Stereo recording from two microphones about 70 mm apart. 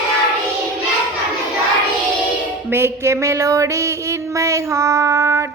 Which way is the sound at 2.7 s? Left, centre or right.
Right.